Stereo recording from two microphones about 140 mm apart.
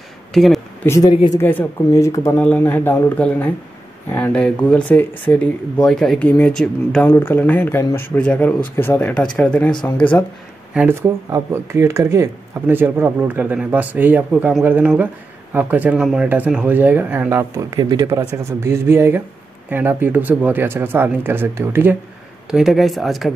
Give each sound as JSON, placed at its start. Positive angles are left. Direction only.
{"t": 0.3, "sound": "a sound", "side_deg": 0}
{"t": 0.8, "sound": "speech", "side_deg": 20}
{"t": 2.3, "sound": "speech", "side_deg": 10}
{"t": 7.1, "sound": "speech", "side_deg": 15}
{"t": 10.7, "sound": "speech", "side_deg": -5}
{"t": 11.0, "sound": "speech", "side_deg": -20}
{"t": 22.5, "sound": "speech", "side_deg": 0}